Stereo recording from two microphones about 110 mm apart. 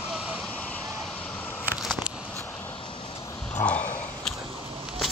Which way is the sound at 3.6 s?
25° left (ahead or behind).